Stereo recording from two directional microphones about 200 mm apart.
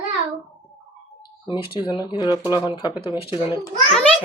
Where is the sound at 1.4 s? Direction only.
25° left (ahead or behind).